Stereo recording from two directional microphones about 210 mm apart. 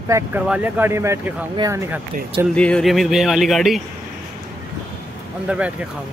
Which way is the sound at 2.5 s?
5° left (ahead or behind).